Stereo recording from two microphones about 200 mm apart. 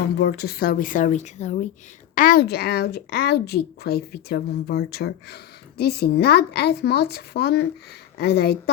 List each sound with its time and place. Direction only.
0.2 s speech: 55° left (ahead or behind); by 1.5 s 35° left (ahead or behind)
2.1 s speech: 45° left (ahead or behind)